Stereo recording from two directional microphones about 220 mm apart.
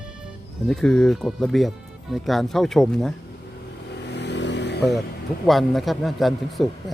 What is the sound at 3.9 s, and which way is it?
Motorcycle, 50° left (ahead or behind).